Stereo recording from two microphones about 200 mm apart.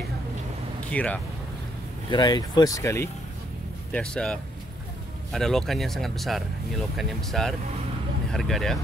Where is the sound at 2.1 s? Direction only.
20° left (ahead or behind); by 8.8 s centre (ahead or behind).